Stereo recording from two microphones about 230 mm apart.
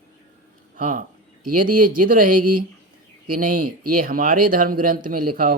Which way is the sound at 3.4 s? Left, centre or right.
Right.